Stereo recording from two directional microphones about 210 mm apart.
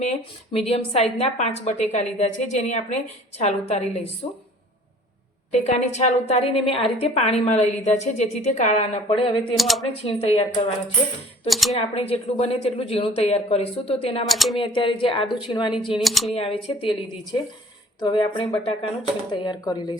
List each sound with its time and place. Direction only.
0.0 s a woman's voice: 30° left (ahead or behind)
5.5 s a woman's voice: 35° left (ahead or behind)
9.6 s speech: centre (ahead or behind)
9.9 s speech: 25° left (ahead or behind)
11.4 s speech: centre (ahead or behind)
11.7 s speech: 30° left (ahead or behind)
14.3 s speech: centre (ahead or behind)
14.6 s speech: 25° left (ahead or behind)
16.0 s speech: centre (ahead or behind)
16.3 s speech: 25° left (ahead or behind)
18.0 s speech: 25° left (ahead or behind)